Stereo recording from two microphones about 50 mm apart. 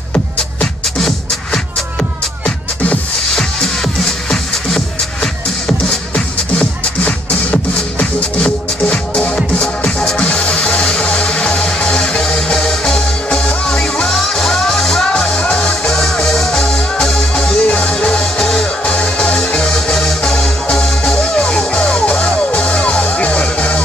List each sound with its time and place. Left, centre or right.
0.9 s music: centre
3.3 s music: centre
5.9 s music: left
9.8 s music: centre
10.2 s music: left; by 15.0 s centre
15.1 s music: left
17.6 s music: left